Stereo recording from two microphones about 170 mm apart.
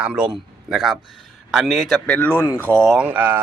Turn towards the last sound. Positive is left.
turn(degrees=-10)  # may be behind; listen again after turning